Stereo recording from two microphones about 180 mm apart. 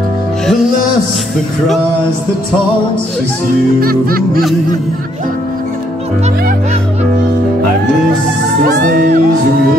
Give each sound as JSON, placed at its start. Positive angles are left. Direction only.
{"t": 3.8, "sound": "music", "side_deg": -55}
{"t": 8.6, "sound": "music", "side_deg": -55}